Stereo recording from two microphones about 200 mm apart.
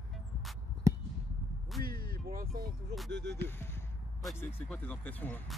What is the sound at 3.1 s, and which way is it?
Speech, 60° right (ahead or behind).